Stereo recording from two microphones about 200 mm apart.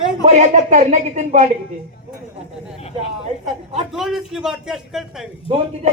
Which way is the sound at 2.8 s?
30° left (ahead or behind).